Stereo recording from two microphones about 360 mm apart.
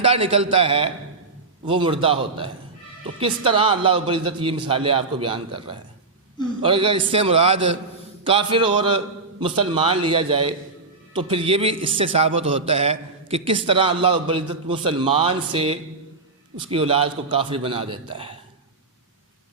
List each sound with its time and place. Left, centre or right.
0.0 s a man's voice: centre